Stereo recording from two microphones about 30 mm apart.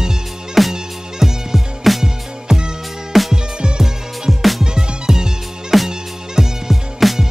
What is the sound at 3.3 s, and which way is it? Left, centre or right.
Music, right.